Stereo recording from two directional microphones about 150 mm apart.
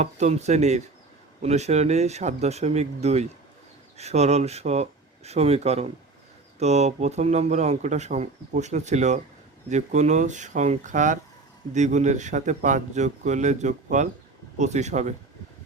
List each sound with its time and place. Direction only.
0.0 s speech: 50° right (ahead or behind)